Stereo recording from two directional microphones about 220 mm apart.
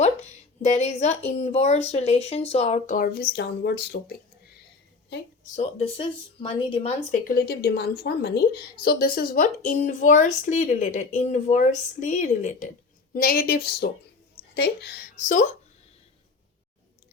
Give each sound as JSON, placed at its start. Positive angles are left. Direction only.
{"t": 0.0, "sound": "a woman's voice", "side_deg": 30}
{"t": 5.5, "sound": "speech", "side_deg": 25}
{"t": 7.3, "sound": "a woman's voice", "side_deg": 45}